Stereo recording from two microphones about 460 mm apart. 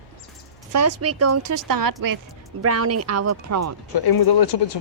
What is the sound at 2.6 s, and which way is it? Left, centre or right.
Speech, right.